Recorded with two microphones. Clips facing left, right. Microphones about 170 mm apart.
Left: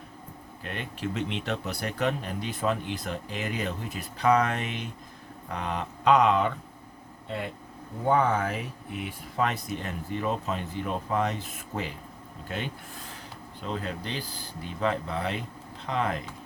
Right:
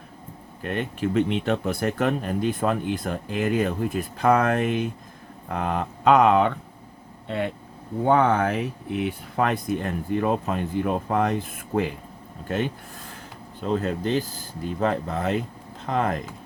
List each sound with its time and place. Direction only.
0.6 s speech: 50° right (ahead or behind)
7.3 s speech: 65° right (ahead or behind)
9.3 s speech: 55° right (ahead or behind)